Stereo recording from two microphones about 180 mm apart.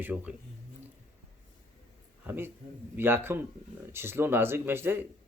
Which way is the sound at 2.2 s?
10° right (ahead or behind).